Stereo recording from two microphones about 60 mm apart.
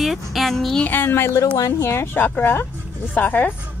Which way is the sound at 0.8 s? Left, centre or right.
Left.